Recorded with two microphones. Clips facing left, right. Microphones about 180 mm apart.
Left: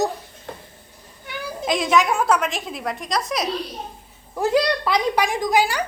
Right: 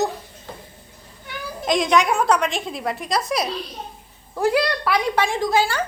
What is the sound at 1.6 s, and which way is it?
A woman's voice, 5° left (ahead or behind).